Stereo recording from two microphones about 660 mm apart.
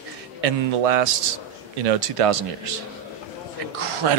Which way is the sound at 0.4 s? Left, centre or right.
Right.